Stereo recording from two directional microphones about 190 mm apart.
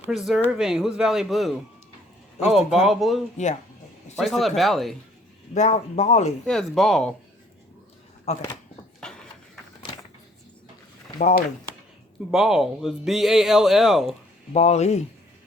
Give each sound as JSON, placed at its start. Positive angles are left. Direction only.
{"t": 0.0, "sound": "speech", "side_deg": 0}
{"t": 3.3, "sound": "speech", "side_deg": 40}
{"t": 4.2, "sound": "speech", "side_deg": 0}
{"t": 5.5, "sound": "speech", "side_deg": 35}
{"t": 6.4, "sound": "speech", "side_deg": 0}
{"t": 8.2, "sound": "a sound", "side_deg": 35}
{"t": 9.0, "sound": "a sound", "side_deg": 5}
{"t": 11.2, "sound": "speech", "side_deg": 40}
{"t": 12.3, "sound": "speech", "side_deg": 0}
{"t": 14.5, "sound": "speech", "side_deg": 35}